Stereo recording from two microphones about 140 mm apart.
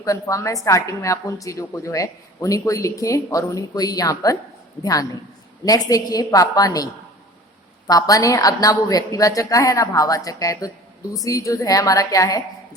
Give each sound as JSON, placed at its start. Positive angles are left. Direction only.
{"t": 0.0, "sound": "a woman's voice", "side_deg": 25}
{"t": 7.9, "sound": "a woman's voice", "side_deg": 25}